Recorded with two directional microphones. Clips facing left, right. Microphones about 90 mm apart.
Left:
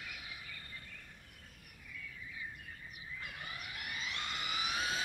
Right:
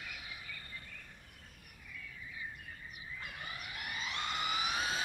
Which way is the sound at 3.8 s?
25° right (ahead or behind).